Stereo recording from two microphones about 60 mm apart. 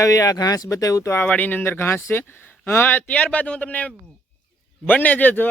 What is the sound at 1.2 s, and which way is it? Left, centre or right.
A man's voice, left.